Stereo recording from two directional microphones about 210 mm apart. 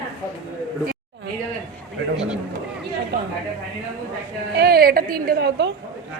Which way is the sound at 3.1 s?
50° right (ahead or behind).